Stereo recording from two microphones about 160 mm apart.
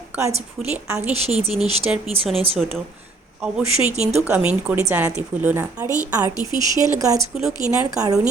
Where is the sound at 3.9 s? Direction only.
40° right (ahead or behind).